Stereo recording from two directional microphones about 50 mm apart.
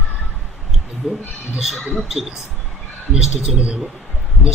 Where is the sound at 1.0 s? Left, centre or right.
Centre.